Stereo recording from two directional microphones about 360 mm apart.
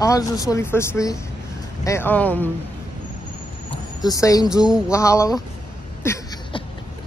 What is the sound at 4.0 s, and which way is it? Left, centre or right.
Speech, centre.